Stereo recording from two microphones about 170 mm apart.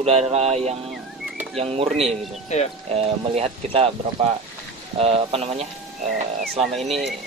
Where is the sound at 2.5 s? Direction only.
40° left (ahead or behind).